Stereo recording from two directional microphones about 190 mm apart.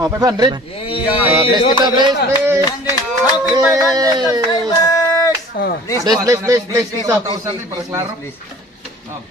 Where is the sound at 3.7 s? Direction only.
20° right (ahead or behind).